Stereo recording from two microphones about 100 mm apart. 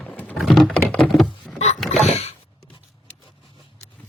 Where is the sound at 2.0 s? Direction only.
90° left.